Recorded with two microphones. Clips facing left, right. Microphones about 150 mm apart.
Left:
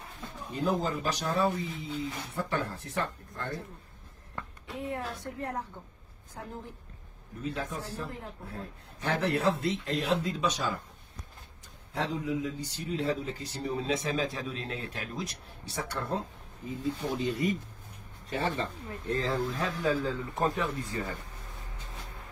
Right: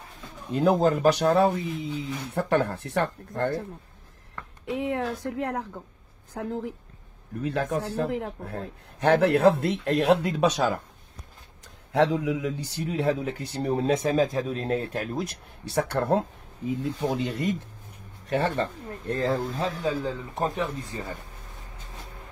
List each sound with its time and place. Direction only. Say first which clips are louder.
0.5 s a man's voice: right 9 dB; 80° right
4.6 s speech: right 8 dB; 90° right
7.4 s a man's voice: right 8 dB; 70° right (ahead or behind)
11.9 s a man's voice: right 9 dB; 85° right; by 15.2 s 50° right (ahead or behind)
15.7 s a man's voice: right 10 dB; 65° right (ahead or behind)
18.3 s a man's voice: right 6 dB; 65° right (ahead or behind)
19.0 s speech: right 4 dB; 55° right (ahead or behind)
19.5 s speech: right 3 dB; 30° right (ahead or behind)
20.1 s speech: right 1 dB; 20° right (ahead or behind)